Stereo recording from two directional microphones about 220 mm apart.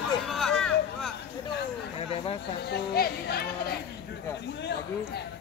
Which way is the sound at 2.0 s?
25° left (ahead or behind).